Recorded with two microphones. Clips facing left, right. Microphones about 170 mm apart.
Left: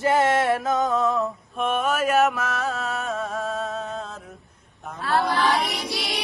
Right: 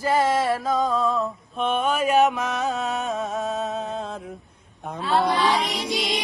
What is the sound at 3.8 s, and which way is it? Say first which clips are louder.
Mantra: right 2 dB; 30° right (ahead or behind).